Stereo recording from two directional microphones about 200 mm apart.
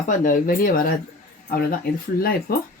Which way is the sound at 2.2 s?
50° left (ahead or behind).